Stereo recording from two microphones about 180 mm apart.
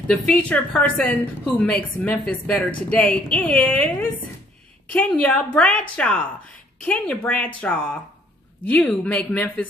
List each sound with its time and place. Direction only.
0.1 s a woman's voice: 5° left (ahead or behind)